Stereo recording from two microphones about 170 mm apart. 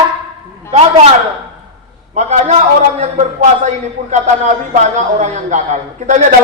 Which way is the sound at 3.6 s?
45° right (ahead or behind).